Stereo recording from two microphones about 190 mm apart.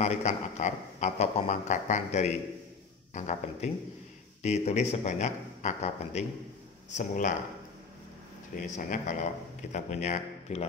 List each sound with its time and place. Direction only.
0.0 s a man's voice: 35° left (ahead or behind)
8.7 s a man's voice: 40° left (ahead or behind)